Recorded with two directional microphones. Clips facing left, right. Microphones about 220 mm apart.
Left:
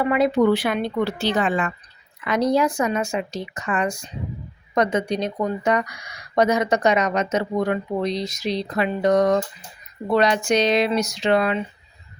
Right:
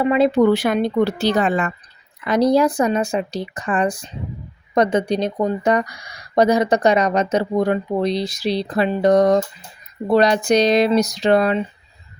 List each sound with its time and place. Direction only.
0.0 s speech: 25° right (ahead or behind)
0.5 s speech: 45° right (ahead or behind)